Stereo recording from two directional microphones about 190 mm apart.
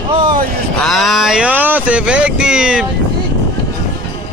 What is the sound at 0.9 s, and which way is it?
Speech, centre (ahead or behind).